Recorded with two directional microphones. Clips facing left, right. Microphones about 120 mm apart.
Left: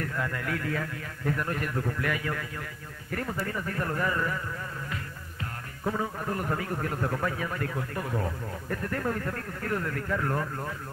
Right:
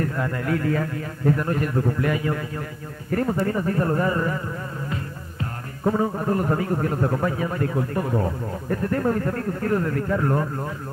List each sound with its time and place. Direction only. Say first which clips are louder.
0.0 s speech: right 7 dB; 30° right (ahead or behind)